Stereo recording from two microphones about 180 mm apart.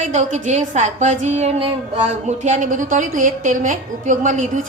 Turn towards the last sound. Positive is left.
turn(degrees=-45)  # may be behind; listen again after turning